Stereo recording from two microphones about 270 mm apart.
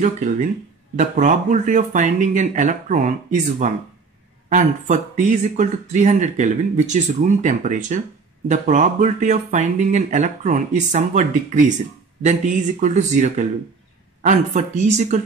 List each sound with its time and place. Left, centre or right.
0.0 s speech: right
12.8 s speech: right